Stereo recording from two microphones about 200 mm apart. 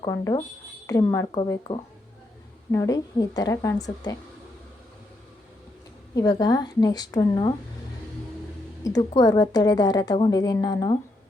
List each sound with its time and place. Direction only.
0.0 s a woman's voice: 15° left (ahead or behind)
6.1 s a woman's voice: 20° left (ahead or behind)
8.8 s a woman's voice: 15° left (ahead or behind)